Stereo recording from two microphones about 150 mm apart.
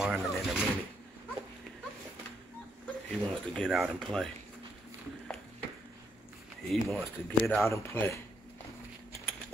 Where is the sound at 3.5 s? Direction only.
Centre (ahead or behind).